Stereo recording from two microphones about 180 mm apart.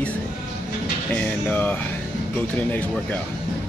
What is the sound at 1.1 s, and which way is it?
Speech, 10° left (ahead or behind).